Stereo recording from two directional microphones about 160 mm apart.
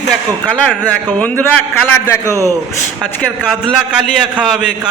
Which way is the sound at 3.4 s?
5° right (ahead or behind).